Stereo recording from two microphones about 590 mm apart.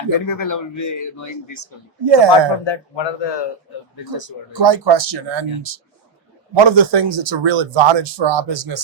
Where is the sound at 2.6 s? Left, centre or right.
Left.